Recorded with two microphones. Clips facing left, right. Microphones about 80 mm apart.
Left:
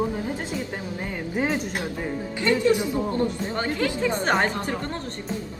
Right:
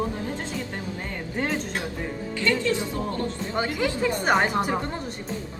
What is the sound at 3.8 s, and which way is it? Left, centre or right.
Speech, centre.